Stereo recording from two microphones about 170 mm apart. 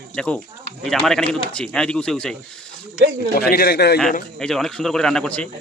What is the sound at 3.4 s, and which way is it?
Speech, 65° left (ahead or behind).